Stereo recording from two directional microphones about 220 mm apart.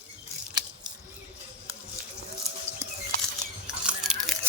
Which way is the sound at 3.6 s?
Centre (ahead or behind).